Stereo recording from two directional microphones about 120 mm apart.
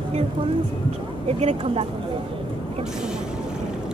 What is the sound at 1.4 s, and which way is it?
Speech, 60° right (ahead or behind).